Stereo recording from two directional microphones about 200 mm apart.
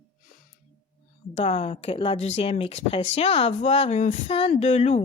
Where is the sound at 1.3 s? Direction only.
35° left (ahead or behind).